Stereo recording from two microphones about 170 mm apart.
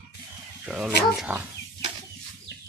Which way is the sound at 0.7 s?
5° right (ahead or behind).